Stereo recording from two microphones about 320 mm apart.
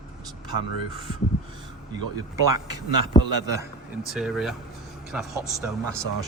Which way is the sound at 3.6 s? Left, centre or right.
Centre.